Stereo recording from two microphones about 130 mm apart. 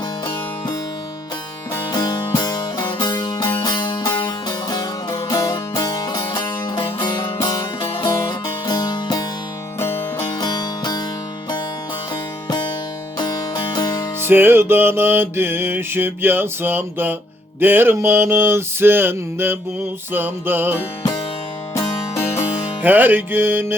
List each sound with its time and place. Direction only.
1.9 s music: 35° left (ahead or behind)
9.8 s music: 15° left (ahead or behind)
10.4 s music: 30° left (ahead or behind)
12.5 s music: 35° left (ahead or behind)
14.3 s music: 15° right (ahead or behind)
21.8 s music: 20° left (ahead or behind)
22.8 s music: 15° right (ahead or behind)